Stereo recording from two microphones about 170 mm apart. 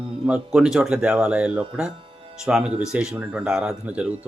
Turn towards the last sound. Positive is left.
turn(degrees=-10)  # may be behind; listen again after turning